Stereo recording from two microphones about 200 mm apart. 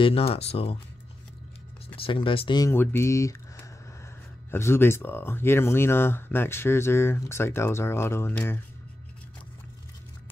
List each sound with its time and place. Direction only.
0.0 s speech: 30° left (ahead or behind)
2.0 s speech: 25° left (ahead or behind)